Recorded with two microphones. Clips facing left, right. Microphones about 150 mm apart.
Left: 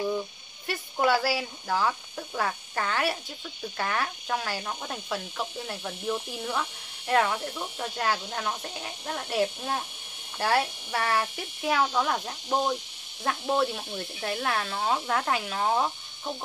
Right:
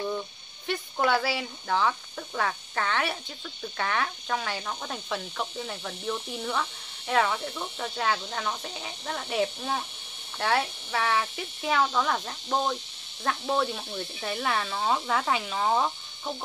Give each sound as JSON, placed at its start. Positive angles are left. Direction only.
{"t": 0.7, "sound": "speech", "side_deg": 5}